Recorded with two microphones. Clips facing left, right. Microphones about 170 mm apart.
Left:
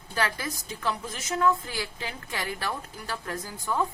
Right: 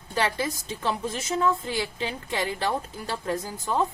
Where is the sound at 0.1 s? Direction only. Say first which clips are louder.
Right 4 dB; 25° right (ahead or behind).